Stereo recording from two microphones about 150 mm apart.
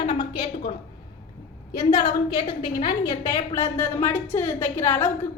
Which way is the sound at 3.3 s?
20° left (ahead or behind).